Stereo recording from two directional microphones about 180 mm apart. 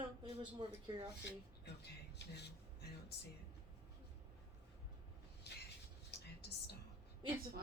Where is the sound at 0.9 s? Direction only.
25° right (ahead or behind).